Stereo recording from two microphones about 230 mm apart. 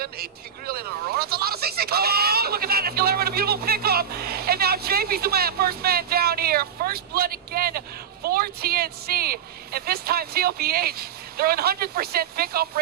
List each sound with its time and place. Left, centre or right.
0.0 s speech: right